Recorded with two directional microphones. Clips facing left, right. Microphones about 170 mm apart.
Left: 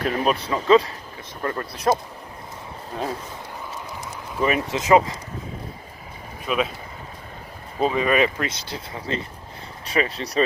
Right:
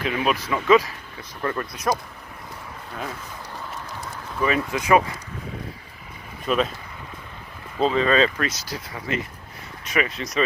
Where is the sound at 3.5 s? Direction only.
15° left (ahead or behind).